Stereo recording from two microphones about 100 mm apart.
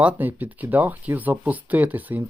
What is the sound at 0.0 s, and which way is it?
Speech, 15° right (ahead or behind).